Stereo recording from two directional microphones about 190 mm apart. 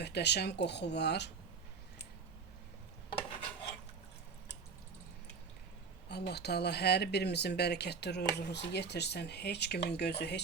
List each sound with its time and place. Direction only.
0.0 s speech: 60° left (ahead or behind)
3.1 s filing: 30° left (ahead or behind)
6.1 s speech: 60° left (ahead or behind)